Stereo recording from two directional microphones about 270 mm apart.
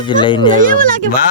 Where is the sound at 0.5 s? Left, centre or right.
Right.